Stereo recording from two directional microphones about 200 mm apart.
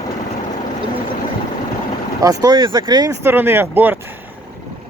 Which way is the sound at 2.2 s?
20° right (ahead or behind).